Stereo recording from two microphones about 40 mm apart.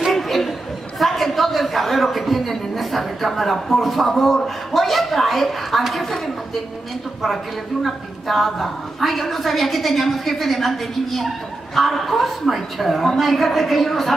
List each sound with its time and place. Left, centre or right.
0.1 s chatter: centre
7.8 s a woman's voice: centre